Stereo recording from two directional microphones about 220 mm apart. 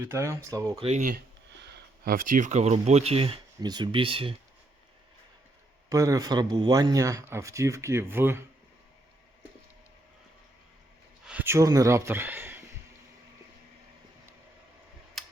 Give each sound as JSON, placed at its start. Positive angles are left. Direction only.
{"t": 0.0, "sound": "a man's voice", "side_deg": -10}
{"t": 0.8, "sound": "speech", "side_deg": -30}
{"t": 1.6, "sound": "speech", "side_deg": -40}
{"t": 5.9, "sound": "a man's voice", "side_deg": -15}
{"t": 11.3, "sound": "speech", "side_deg": -10}
{"t": 15.2, "sound": "tick-tock", "side_deg": 0}